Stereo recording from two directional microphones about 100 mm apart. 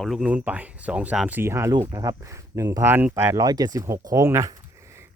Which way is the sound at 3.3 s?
40° right (ahead or behind).